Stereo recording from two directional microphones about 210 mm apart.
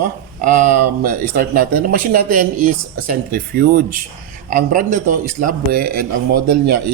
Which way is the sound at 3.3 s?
45° right (ahead or behind).